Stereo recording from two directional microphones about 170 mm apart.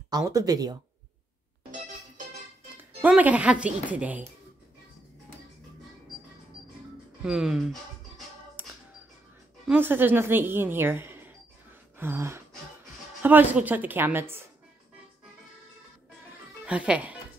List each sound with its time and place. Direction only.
0.1 s speech: 20° right (ahead or behind)
2.8 s speech: 10° right (ahead or behind)
7.2 s speech: 5° right (ahead or behind)
8.6 s music: 10° right (ahead or behind)
9.7 s speech: 10° right (ahead or behind)
16.6 s speech: 5° right (ahead or behind)